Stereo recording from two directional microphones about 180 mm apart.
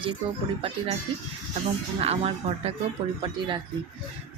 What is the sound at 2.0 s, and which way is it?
A woman's voice, 35° right (ahead or behind).